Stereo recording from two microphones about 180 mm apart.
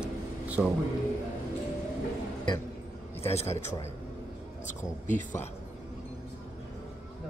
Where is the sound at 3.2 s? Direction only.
35° left (ahead or behind).